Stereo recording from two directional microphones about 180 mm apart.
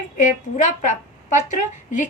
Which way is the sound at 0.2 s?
40° left (ahead or behind).